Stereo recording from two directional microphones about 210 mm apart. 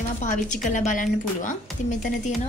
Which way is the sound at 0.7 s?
35° left (ahead or behind).